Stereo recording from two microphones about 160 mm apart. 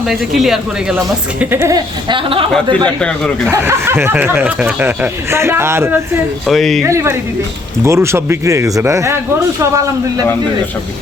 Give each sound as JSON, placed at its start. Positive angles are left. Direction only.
{"t": 0.1, "sound": "speech", "side_deg": 0}
{"t": 0.9, "sound": "speech", "side_deg": -15}
{"t": 2.0, "sound": "speech", "side_deg": -30}
{"t": 2.8, "sound": "speech", "side_deg": 5}
{"t": 3.5, "sound": "speech", "side_deg": -15}
{"t": 6.5, "sound": "speech", "side_deg": 0}
{"t": 6.8, "sound": "a man's voice", "side_deg": -15}